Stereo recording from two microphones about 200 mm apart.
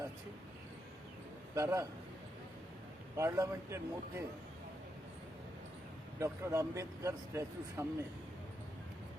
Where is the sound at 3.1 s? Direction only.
15° right (ahead or behind).